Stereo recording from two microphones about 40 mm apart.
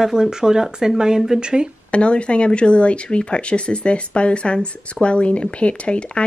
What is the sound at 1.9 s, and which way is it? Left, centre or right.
Speech, left.